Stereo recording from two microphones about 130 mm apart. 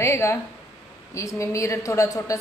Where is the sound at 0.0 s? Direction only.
20° left (ahead or behind).